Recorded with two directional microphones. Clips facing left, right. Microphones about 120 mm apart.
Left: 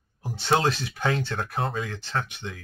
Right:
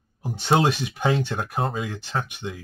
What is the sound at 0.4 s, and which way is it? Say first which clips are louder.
Speech: right 3 dB; 15° right (ahead or behind).